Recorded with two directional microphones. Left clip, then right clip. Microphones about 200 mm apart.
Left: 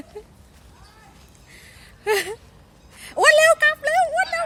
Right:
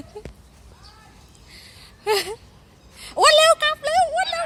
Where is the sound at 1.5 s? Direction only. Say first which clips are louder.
Right 1 dB; 5° left (ahead or behind).